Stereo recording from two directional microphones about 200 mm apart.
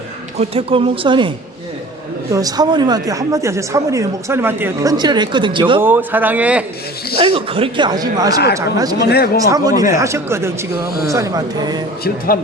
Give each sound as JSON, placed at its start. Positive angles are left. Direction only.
{"t": 0.3, "sound": "speech", "side_deg": -30}
{"t": 2.3, "sound": "speech", "side_deg": -20}
{"t": 5.8, "sound": "speech", "side_deg": -10}
{"t": 7.2, "sound": "speech", "side_deg": -25}
{"t": 9.0, "sound": "speech", "side_deg": 50}
{"t": 9.5, "sound": "speech", "side_deg": -20}
{"t": 12.0, "sound": "speech", "side_deg": 45}